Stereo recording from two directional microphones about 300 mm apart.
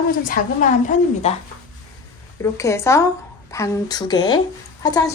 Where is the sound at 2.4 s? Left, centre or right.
Centre.